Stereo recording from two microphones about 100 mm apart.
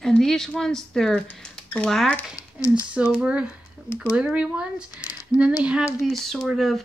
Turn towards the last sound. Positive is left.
turn(degrees=0)  # may be behind; listen again after turning